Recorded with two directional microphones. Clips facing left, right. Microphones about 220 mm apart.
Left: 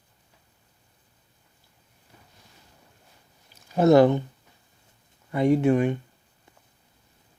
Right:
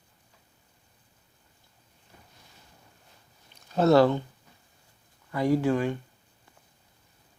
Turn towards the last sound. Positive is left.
turn(degrees=20)  # may be behind; listen again after turning